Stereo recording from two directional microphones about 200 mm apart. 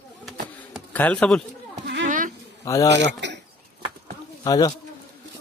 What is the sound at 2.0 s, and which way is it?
Insect, 40° right (ahead or behind).